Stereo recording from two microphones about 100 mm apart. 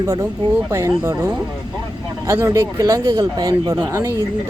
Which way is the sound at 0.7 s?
30° right (ahead or behind).